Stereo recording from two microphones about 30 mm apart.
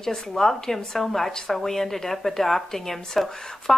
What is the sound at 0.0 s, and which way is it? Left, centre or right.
Speech, centre.